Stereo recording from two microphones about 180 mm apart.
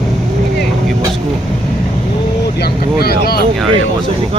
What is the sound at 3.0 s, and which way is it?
Speech, 60° left (ahead or behind).